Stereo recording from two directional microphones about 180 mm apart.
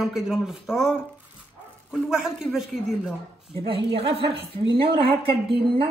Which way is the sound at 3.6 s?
30° right (ahead or behind).